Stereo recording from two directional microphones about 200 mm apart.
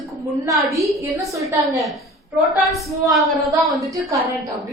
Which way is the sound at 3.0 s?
20° right (ahead or behind).